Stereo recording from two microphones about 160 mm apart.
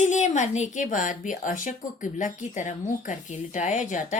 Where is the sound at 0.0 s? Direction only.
50° left (ahead or behind).